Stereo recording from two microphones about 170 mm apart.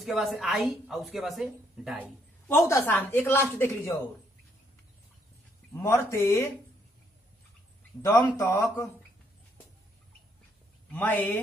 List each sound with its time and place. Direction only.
0.0 s speech: centre (ahead or behind)
2.4 s speech: 20° left (ahead or behind)
5.7 s speech: 15° left (ahead or behind)
8.0 s speech: 20° left (ahead or behind)
10.9 s speech: 10° left (ahead or behind)